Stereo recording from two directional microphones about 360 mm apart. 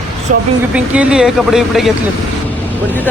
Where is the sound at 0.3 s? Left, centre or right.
Right.